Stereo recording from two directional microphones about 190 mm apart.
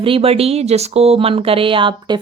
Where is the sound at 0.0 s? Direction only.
30° right (ahead or behind).